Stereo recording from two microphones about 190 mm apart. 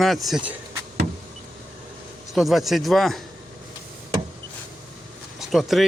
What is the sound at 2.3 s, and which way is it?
Speech, centre (ahead or behind).